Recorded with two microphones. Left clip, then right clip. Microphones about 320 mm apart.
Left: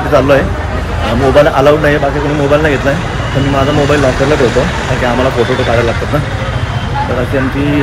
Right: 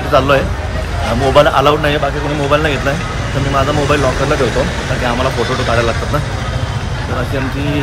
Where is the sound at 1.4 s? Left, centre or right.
Centre.